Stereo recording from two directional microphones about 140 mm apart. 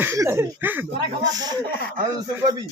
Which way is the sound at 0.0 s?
15° right (ahead or behind).